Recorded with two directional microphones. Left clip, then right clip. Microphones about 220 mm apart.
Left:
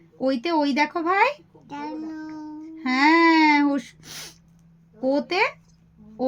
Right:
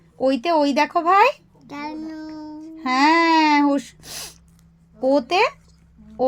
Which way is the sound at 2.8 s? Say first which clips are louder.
Right 2 dB; 35° right (ahead or behind).